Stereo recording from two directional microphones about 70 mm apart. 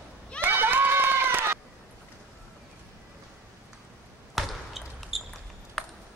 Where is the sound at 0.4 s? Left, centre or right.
Right.